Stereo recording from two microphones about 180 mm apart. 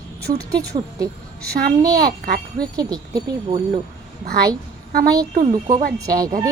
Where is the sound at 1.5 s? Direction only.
55° right (ahead or behind).